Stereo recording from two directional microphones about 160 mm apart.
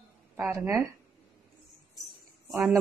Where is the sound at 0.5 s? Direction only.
20° right (ahead or behind).